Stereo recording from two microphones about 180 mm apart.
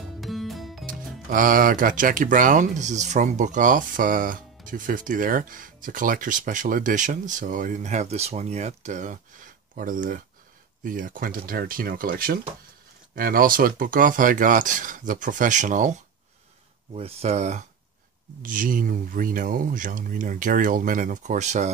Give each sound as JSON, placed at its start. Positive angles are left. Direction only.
{"t": 0.2, "sound": "music", "side_deg": 0}
{"t": 0.8, "sound": "speech", "side_deg": -50}